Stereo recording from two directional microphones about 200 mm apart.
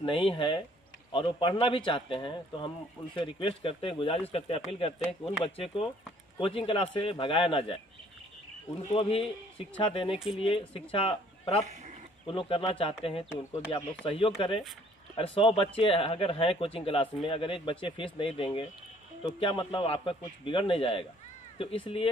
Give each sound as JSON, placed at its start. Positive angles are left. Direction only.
{"t": 0.0, "sound": "speech", "side_deg": 25}
{"t": 8.8, "sound": "speech", "side_deg": 30}
{"t": 10.1, "sound": "speech", "side_deg": 0}
{"t": 10.4, "sound": "speech", "side_deg": 25}
{"t": 11.6, "sound": "speech", "side_deg": -35}
{"t": 12.3, "sound": "speech", "side_deg": 25}
{"t": 19.7, "sound": "speech", "side_deg": 25}